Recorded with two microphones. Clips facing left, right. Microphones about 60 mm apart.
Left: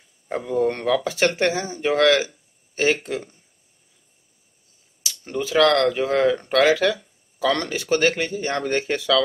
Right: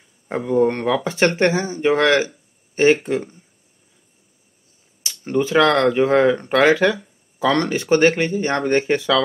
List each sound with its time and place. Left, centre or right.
0.3 s speech: centre
5.0 s speech: right